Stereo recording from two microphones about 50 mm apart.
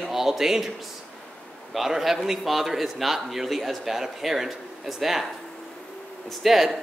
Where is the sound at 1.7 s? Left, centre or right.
Centre.